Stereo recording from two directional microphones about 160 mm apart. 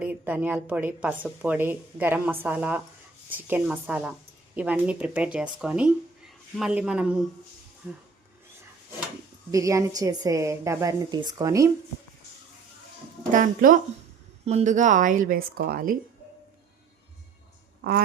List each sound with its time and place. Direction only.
0.0 s a woman's voice: 10° right (ahead or behind)
9.5 s a woman's voice: 20° right (ahead or behind)
13.3 s speech: 55° right (ahead or behind)
14.4 s speech: 45° right (ahead or behind); by 16.0 s 65° right (ahead or behind)